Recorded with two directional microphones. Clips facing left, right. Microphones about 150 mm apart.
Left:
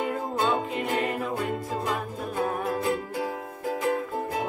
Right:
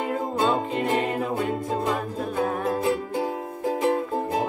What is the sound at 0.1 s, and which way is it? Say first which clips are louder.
Music: right 3 dB; 20° right (ahead or behind).